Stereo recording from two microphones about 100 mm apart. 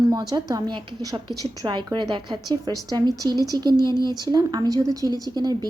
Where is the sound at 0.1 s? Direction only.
40° right (ahead or behind).